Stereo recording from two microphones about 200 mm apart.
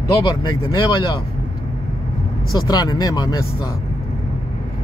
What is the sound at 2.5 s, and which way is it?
Speech, 20° left (ahead or behind).